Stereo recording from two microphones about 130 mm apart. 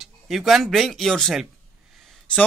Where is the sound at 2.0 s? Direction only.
Centre (ahead or behind).